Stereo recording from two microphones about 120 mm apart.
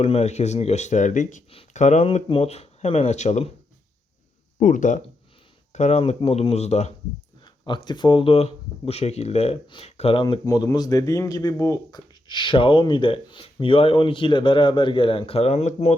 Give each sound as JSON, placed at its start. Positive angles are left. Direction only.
{"t": 0.0, "sound": "speech", "side_deg": 60}
{"t": 1.7, "sound": "speech", "side_deg": 80}
{"t": 2.0, "sound": "speech", "side_deg": 55}
{"t": 4.6, "sound": "speech", "side_deg": 90}
{"t": 5.7, "sound": "speech", "side_deg": 65}
{"t": 7.4, "sound": "speech", "side_deg": 40}
{"t": 10.4, "sound": "speech", "side_deg": 30}